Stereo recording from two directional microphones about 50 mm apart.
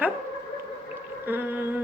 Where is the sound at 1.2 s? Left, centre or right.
Right.